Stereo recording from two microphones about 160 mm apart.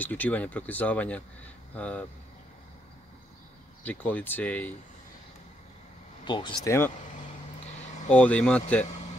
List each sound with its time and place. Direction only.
0.0 s speech: 10° left (ahead or behind)
3.8 s speech: 10° left (ahead or behind)
6.2 s speech: 30° left (ahead or behind)
8.1 s speech: 10° left (ahead or behind)